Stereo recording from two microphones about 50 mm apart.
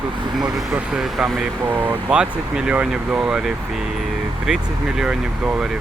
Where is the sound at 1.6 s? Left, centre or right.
Right.